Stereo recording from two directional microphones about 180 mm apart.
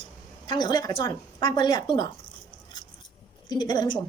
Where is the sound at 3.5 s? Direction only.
25° left (ahead or behind).